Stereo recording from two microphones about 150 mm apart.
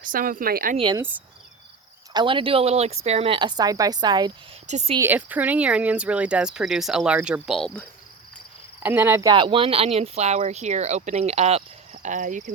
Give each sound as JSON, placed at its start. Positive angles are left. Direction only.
{"t": 0.0, "sound": "speech", "side_deg": -65}
{"t": 2.1, "sound": "speech", "side_deg": -35}
{"t": 4.6, "sound": "speech", "side_deg": -50}
{"t": 4.9, "sound": "speech", "side_deg": -10}
{"t": 8.8, "sound": "speech", "side_deg": -15}
{"t": 9.3, "sound": "speech", "side_deg": -35}
{"t": 12.0, "sound": "speech", "side_deg": -55}